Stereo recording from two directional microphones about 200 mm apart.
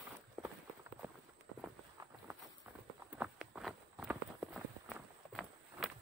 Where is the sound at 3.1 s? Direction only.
5° right (ahead or behind).